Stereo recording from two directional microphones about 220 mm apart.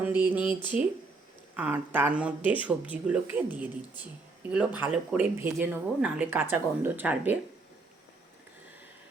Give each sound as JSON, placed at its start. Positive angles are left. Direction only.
{"t": 0.0, "sound": "a sound", "side_deg": -5}
{"t": 0.6, "sound": "speech", "side_deg": 20}
{"t": 1.5, "sound": "speech", "side_deg": -5}